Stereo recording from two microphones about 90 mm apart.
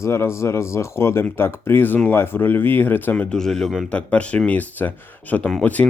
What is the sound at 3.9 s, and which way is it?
Speech, 15° left (ahead or behind).